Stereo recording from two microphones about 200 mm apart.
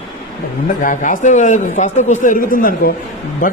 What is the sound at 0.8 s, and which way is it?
A man's voice, 40° left (ahead or behind).